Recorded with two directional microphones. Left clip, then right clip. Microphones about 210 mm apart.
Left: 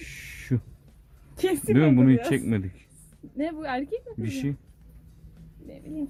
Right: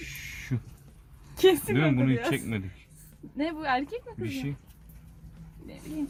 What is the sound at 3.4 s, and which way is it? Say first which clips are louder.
Speech: right 1 dB; 20° left (ahead or behind).